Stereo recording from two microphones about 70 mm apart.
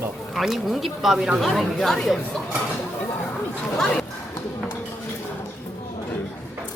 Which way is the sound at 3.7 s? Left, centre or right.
Centre.